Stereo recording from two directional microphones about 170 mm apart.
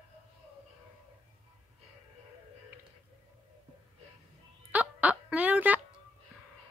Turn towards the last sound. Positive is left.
turn(degrees=-10)  # may be behind; listen again after turning